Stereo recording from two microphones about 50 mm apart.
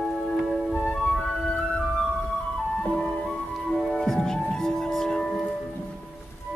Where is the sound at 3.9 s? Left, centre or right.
Centre.